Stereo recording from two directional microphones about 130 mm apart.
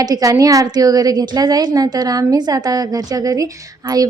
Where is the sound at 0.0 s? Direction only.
25° right (ahead or behind).